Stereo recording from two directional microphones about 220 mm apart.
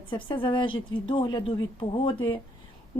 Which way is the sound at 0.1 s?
20° left (ahead or behind).